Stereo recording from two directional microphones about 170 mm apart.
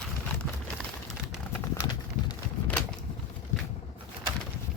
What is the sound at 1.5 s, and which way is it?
Clip-clop, 15° left (ahead or behind).